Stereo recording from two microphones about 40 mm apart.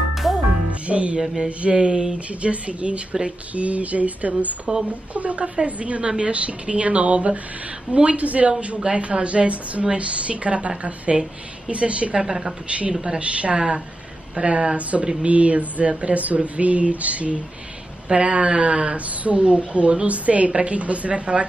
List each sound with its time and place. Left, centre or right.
0.1 s music: centre
0.7 s music: right
1.2 s a woman's voice: centre
1.6 s speech: right
2.1 s speech: right
4.7 s speech: right
5.1 s speech: right
12.2 s a woman's voice: centre
13.2 s speech: right